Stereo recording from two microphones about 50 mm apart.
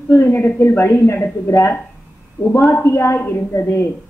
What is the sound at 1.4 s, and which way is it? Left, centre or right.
A woman's voice, left.